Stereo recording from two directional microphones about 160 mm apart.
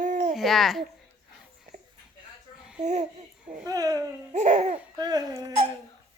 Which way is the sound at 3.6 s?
20° right (ahead or behind).